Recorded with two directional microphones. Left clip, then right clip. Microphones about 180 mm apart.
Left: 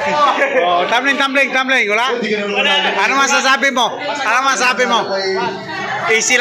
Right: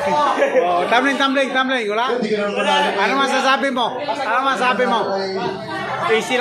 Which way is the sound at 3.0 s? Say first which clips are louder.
Left 4 dB; 5° left (ahead or behind).